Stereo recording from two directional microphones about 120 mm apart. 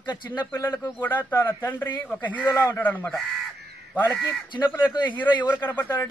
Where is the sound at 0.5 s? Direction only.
30° left (ahead or behind).